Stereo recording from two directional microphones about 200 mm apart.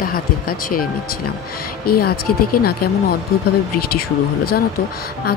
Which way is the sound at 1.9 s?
50° left (ahead or behind).